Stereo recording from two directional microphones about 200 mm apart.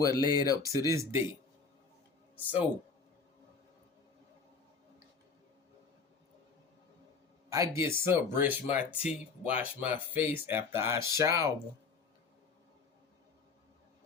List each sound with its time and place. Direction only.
0.0 s speech: 20° left (ahead or behind)
0.9 s speech: 15° right (ahead or behind)
2.4 s speech: 10° right (ahead or behind)
7.5 s speech: 15° right (ahead or behind)